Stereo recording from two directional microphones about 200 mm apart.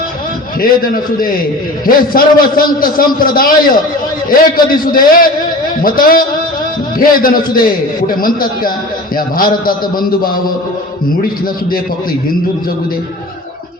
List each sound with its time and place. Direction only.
0.6 s a man's voice: 45° left (ahead or behind)